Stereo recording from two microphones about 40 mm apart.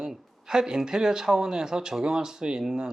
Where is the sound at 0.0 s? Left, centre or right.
Centre.